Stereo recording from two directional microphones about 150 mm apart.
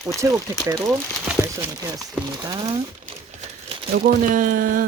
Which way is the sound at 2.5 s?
30° right (ahead or behind).